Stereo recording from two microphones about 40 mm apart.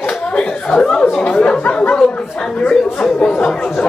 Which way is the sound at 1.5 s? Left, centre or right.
Left.